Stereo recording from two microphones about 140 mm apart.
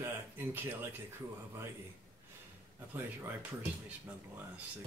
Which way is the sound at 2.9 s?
10° right (ahead or behind).